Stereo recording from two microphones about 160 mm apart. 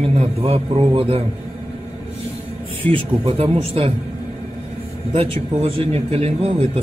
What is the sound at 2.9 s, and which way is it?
A man's voice, 35° right (ahead or behind).